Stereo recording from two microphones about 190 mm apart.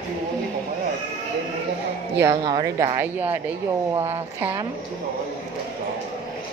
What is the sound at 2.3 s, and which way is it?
A woman's voice, 25° right (ahead or behind).